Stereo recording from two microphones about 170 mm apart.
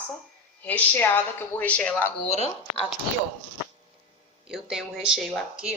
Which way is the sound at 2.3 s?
40° left (ahead or behind).